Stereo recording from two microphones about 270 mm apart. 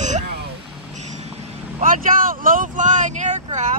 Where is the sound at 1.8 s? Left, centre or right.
Right.